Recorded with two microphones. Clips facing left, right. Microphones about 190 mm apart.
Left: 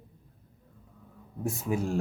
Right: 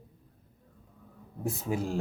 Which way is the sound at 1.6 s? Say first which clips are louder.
Left 2 dB; 25° right (ahead or behind).